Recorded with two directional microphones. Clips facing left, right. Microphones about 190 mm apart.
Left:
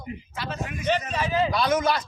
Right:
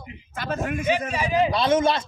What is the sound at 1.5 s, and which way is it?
Speech, 25° right (ahead or behind).